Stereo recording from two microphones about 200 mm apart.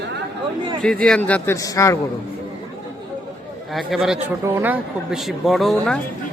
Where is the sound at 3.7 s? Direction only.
Centre (ahead or behind).